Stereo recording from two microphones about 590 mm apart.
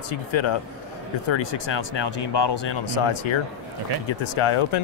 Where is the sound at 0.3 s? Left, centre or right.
Left.